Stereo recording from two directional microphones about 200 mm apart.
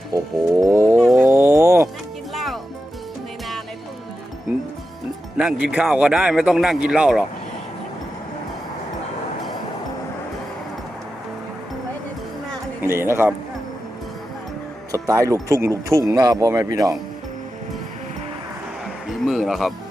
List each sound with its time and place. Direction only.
0.1 s speech: 15° right (ahead or behind)
1.2 s a sound: 10° right (ahead or behind)
2.3 s music: centre (ahead or behind)
4.5 s music: 5° right (ahead or behind)
5.4 s a man's voice: 5° right (ahead or behind)
12.8 s a man's voice: 10° right (ahead or behind)
14.9 s speech: 15° right (ahead or behind)
19.0 s speech: centre (ahead or behind)